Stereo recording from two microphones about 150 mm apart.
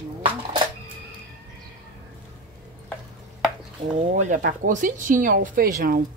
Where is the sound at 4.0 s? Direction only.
55° right (ahead or behind).